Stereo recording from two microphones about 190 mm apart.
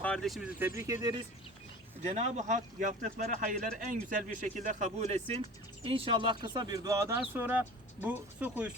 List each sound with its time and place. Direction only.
0.0 s speech: 5° left (ahead or behind); by 1.1 s 15° right (ahead or behind)
2.0 s speech: 35° right (ahead or behind); by 8.7 s 10° right (ahead or behind)